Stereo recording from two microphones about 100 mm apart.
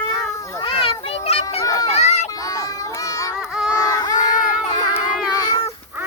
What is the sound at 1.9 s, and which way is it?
Children playing, 90° left.